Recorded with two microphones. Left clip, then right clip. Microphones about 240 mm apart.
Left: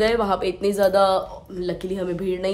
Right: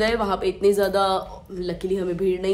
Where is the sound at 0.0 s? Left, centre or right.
Centre.